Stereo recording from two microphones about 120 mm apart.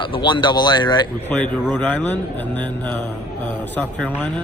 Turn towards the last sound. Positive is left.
turn(degrees=15)  # may be behind; listen again after turning